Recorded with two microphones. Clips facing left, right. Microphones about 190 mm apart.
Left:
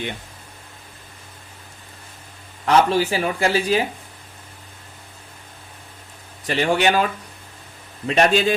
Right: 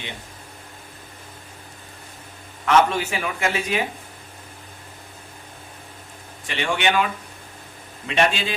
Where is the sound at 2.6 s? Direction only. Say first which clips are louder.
Left 2 dB; 35° left (ahead or behind).